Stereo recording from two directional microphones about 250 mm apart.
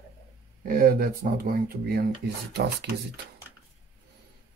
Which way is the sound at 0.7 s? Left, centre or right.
Right.